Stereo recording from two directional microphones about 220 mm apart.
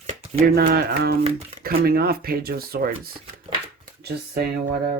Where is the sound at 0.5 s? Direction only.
45° right (ahead or behind).